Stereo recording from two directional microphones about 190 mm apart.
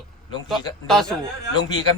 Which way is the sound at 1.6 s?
20° left (ahead or behind).